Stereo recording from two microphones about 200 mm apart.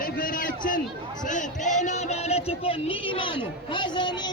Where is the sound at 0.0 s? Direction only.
45° left (ahead or behind).